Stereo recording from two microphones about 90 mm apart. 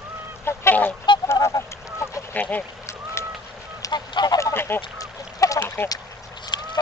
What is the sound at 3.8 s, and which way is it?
Goose, 50° left (ahead or behind).